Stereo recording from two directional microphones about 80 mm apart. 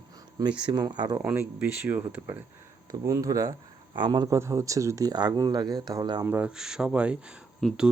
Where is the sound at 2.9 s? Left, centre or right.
Right.